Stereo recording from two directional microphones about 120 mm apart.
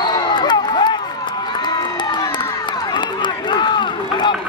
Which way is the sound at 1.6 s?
40° left (ahead or behind).